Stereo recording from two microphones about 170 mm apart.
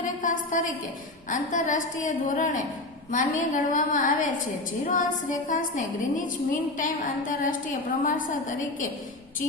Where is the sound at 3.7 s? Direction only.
50° left (ahead or behind).